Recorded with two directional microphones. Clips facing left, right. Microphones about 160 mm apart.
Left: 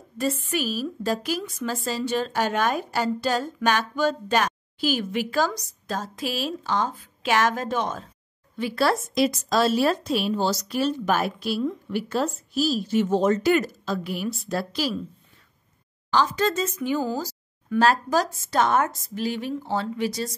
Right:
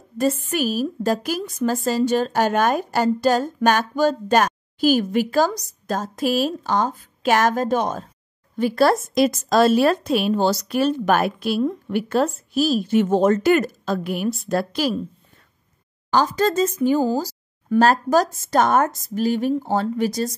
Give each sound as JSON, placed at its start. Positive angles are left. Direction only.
{"t": 0.2, "sound": "a woman's voice", "side_deg": -45}
{"t": 16.1, "sound": "a woman's voice", "side_deg": -45}